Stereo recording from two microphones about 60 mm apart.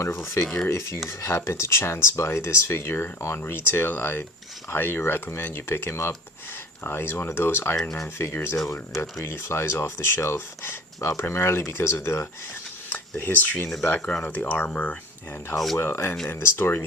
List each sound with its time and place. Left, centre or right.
0.4 s speech: centre
0.7 s speech: left
7.8 s speech: centre
8.2 s speech: left
12.9 s speech: left
14.0 s speech: centre
14.3 s speech: left
15.5 s speech: centre
15.8 s speech: left